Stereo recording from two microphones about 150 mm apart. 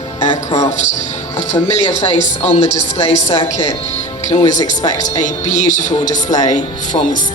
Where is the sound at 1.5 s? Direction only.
50° left (ahead or behind).